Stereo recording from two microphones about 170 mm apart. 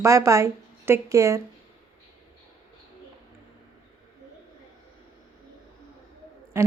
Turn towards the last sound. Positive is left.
turn(degrees=-15)  # may be behind; listen again after turning